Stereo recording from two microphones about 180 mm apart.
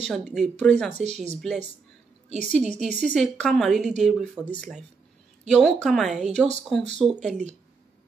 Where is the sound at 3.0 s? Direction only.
5° left (ahead or behind).